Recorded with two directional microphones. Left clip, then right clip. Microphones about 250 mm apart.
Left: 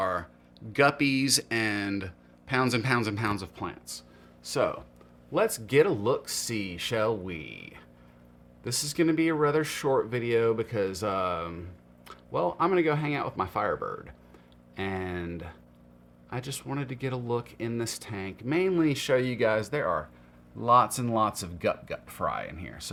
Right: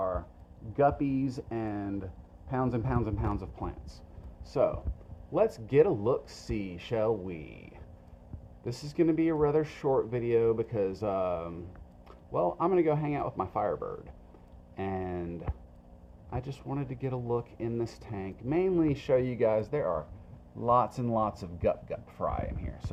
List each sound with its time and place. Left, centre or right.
0.0 s a sound: left
0.9 s speech: centre
1.5 s speech: left
3.5 s speech: centre
13.7 s speech: left
14.8 s speech: centre